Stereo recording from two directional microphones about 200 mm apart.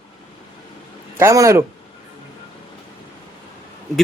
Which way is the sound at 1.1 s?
15° right (ahead or behind).